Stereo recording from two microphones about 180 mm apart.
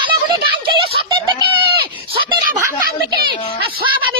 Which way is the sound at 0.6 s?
30° right (ahead or behind).